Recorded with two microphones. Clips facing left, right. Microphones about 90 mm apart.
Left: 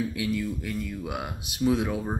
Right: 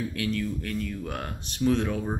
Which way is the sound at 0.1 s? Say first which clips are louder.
Even; 10° left (ahead or behind).